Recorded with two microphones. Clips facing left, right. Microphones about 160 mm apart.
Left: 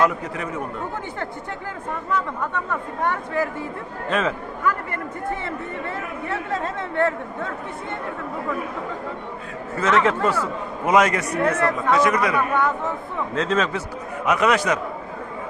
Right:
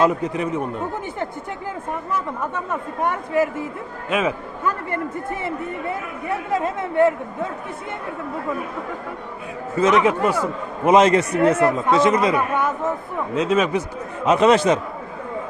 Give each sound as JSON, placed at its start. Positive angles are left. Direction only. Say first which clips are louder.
{"t": 0.0, "sound": "a man's voice", "louder": "right 3 dB", "side_deg": -20}
{"t": 6.6, "sound": "speech", "louder": "right 6 dB", "side_deg": -20}
{"t": 9.7, "sound": "a man's voice", "louder": "right 3 dB", "side_deg": -15}
{"t": 14.3, "sound": "a man's voice", "louder": "right 5 dB", "side_deg": -25}